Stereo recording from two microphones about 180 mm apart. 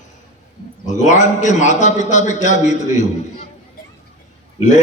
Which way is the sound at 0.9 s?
40° left (ahead or behind).